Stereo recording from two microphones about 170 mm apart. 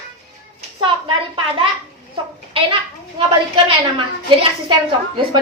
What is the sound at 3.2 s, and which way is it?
A woman's voice, 35° right (ahead or behind).